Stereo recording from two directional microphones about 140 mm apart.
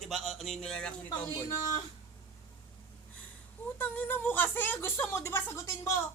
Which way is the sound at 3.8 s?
15° left (ahead or behind).